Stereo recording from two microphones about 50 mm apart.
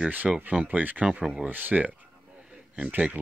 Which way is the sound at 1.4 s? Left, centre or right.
Right.